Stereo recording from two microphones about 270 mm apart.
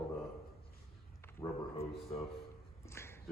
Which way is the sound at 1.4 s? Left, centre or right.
Centre.